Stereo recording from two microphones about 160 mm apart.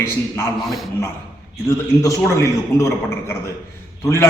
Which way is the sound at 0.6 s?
Centre (ahead or behind).